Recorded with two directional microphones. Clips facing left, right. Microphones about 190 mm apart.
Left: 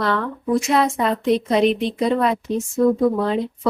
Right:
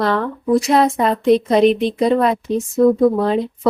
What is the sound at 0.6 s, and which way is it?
Speech, 35° right (ahead or behind).